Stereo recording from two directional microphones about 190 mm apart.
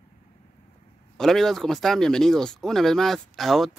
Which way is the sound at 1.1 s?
Centre (ahead or behind).